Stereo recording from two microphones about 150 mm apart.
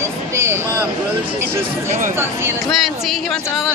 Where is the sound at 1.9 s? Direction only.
60° right (ahead or behind).